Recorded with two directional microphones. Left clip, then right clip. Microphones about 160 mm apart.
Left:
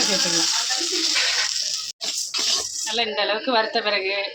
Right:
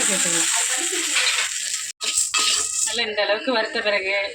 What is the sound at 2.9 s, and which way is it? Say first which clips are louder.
Speech: even; centre (ahead or behind).